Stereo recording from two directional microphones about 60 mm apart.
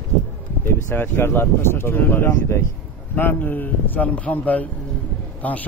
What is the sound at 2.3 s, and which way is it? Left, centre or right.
Speech, left.